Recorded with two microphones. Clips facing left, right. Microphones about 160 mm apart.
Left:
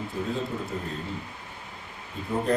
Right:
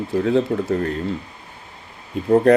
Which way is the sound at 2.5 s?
85° right.